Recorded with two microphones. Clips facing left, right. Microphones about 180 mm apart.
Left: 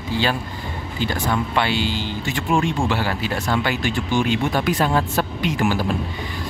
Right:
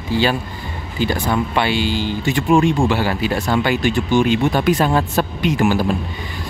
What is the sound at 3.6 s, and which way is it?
Speech, 20° right (ahead or behind).